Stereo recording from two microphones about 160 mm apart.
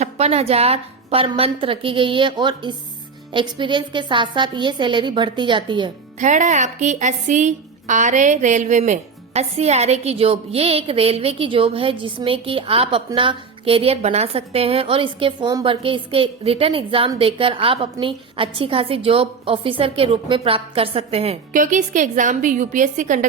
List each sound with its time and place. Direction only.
0.0 s a woman's voice: 40° right (ahead or behind)
6.1 s a woman's voice: 50° right (ahead or behind)
21.5 s a woman's voice: 55° right (ahead or behind)